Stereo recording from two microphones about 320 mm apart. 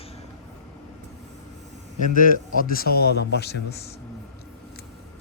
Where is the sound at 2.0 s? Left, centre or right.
Left.